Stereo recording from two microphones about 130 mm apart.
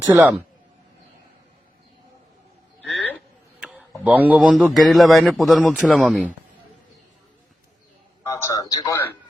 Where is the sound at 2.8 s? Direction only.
10° left (ahead or behind).